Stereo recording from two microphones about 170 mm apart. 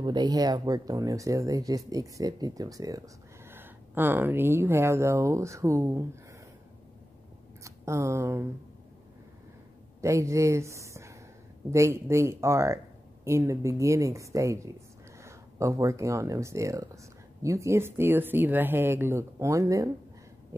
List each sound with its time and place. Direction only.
0.0 s speech: 25° right (ahead or behind)
7.6 s speech: 15° right (ahead or behind)
10.0 s speech: 15° right (ahead or behind)